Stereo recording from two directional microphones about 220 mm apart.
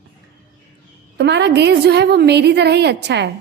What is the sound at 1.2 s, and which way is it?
A woman's voice, 50° right (ahead or behind).